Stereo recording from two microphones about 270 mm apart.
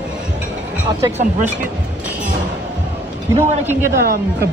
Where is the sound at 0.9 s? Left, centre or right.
Centre.